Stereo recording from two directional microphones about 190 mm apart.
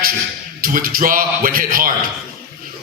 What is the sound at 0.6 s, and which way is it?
A man's voice, 50° right (ahead or behind).